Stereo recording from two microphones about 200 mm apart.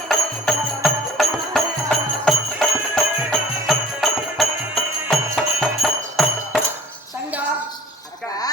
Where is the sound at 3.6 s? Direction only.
Centre (ahead or behind).